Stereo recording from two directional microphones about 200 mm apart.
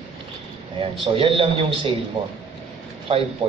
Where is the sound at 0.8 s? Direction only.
25° right (ahead or behind).